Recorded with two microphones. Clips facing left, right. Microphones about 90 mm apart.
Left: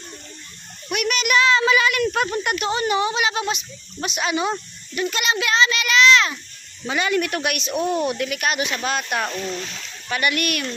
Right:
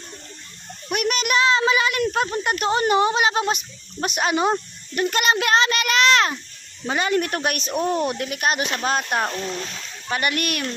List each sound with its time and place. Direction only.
0.9 s a woman's voice: 40° right (ahead or behind)
6.8 s speech: 35° right (ahead or behind)